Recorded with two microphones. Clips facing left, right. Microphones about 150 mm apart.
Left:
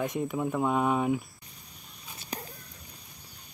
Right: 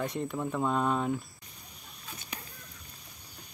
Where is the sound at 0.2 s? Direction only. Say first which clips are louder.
Left 3 dB; 5° left (ahead or behind).